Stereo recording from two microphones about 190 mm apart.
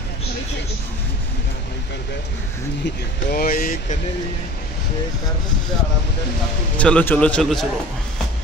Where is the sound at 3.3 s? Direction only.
50° left (ahead or behind).